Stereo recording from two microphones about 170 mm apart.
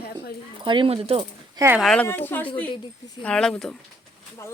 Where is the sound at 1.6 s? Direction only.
15° right (ahead or behind).